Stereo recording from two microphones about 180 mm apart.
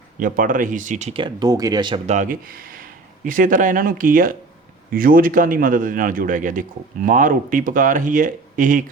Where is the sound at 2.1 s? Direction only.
45° right (ahead or behind).